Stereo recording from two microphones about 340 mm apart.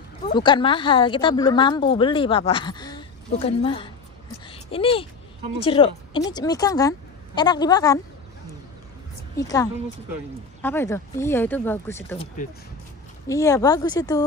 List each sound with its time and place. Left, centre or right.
0.4 s a woman's voice: centre
4.5 s a sound: centre
5.6 s a woman's voice: centre
9.4 s a woman's voice: centre
13.3 s a woman's voice: centre